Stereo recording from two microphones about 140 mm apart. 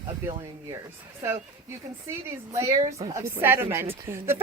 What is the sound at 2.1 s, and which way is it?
Speech, 20° right (ahead or behind).